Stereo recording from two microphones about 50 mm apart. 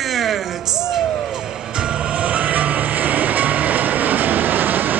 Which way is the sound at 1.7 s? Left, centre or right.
Centre.